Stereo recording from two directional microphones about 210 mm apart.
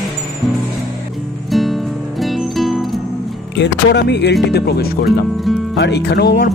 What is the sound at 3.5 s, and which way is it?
Speech, 55° left (ahead or behind).